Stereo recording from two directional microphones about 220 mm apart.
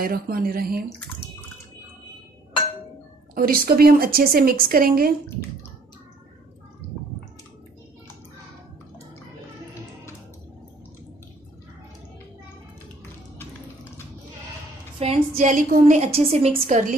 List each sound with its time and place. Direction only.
0.0 s speech: 40° right (ahead or behind)
3.3 s a woman's voice: 40° right (ahead or behind)
15.0 s a woman's voice: 30° right (ahead or behind)